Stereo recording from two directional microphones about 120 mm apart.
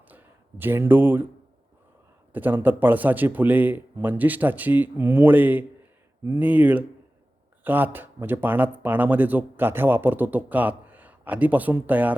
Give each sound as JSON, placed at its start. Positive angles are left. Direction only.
{"t": 0.1, "sound": "speech", "side_deg": -15}
{"t": 2.3, "sound": "speech", "side_deg": -15}